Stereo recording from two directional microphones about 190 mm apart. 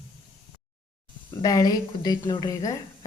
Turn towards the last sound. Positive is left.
turn(degrees=20)  # may be behind; listen again after turning